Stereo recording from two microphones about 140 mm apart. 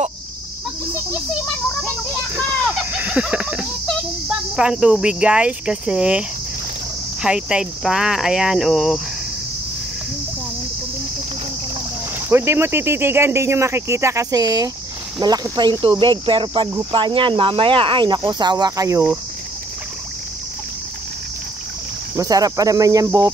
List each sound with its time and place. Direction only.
2.4 s a sound: 5° right (ahead or behind)
4.3 s speech: 5° right (ahead or behind)
12.3 s speech: 15° right (ahead or behind)
22.1 s speech: 25° right (ahead or behind)